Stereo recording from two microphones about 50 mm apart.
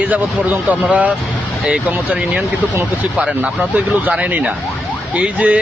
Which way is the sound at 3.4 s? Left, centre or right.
Right.